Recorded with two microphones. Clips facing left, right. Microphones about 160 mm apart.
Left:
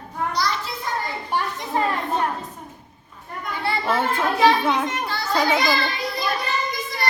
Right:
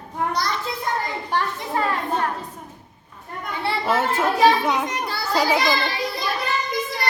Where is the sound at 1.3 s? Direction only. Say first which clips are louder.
Even; 15° left (ahead or behind).